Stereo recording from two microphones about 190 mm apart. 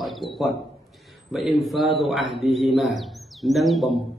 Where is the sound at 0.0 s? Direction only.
Centre (ahead or behind).